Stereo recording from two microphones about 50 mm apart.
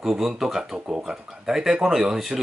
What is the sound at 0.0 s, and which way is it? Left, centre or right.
Speech, centre.